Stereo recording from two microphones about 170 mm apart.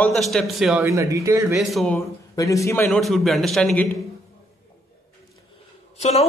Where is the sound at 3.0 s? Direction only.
Centre (ahead or behind).